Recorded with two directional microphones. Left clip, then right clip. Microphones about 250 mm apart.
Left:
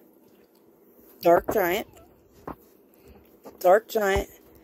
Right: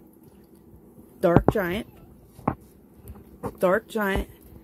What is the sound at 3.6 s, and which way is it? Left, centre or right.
Speech, centre.